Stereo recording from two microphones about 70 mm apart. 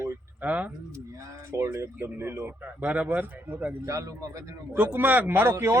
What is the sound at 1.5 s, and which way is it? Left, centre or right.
Speech, right.